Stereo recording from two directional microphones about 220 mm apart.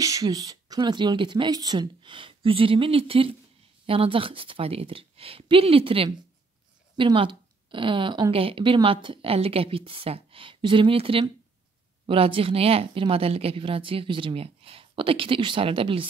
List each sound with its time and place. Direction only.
0.0 s speech: 15° right (ahead or behind)